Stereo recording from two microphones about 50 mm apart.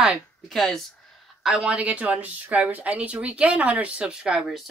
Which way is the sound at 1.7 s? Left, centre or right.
Right.